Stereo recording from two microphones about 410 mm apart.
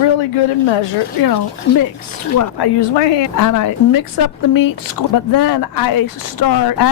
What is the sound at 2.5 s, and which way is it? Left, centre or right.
Speech, left.